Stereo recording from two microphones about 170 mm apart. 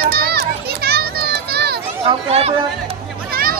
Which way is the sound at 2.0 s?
35° right (ahead or behind).